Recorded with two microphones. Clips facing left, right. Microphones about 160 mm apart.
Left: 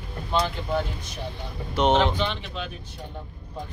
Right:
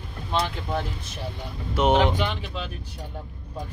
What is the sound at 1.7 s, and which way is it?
Speech, 10° right (ahead or behind).